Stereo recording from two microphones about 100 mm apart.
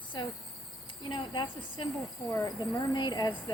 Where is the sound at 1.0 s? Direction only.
55° left (ahead or behind).